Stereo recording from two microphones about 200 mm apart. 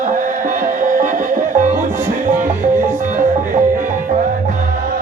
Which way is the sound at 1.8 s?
10° right (ahead or behind).